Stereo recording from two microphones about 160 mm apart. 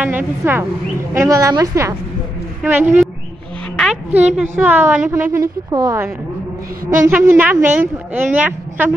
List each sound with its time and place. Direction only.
0.0 s a woman's voice: 10° right (ahead or behind)
3.7 s a sound: centre (ahead or behind)
4.4 s a woman's voice: 10° right (ahead or behind)
7.1 s a woman's voice: 10° right (ahead or behind)